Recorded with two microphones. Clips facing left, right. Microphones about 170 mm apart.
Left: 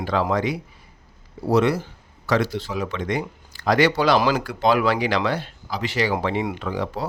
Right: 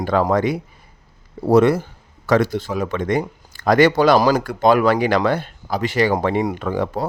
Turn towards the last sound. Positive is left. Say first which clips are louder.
# right 5 dB
turn(degrees=-50)  # may be behind; listen again after turning